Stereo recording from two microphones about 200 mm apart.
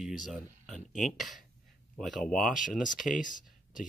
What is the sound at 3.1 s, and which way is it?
Speech, 40° left (ahead or behind).